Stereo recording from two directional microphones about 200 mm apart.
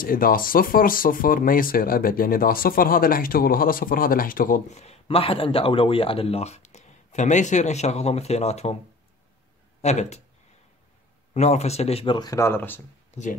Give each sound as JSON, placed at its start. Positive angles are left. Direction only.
{"t": 0.0, "sound": "speech", "side_deg": 45}
{"t": 9.8, "sound": "speech", "side_deg": 35}
{"t": 11.3, "sound": "speech", "side_deg": 35}
{"t": 13.2, "sound": "speech", "side_deg": 35}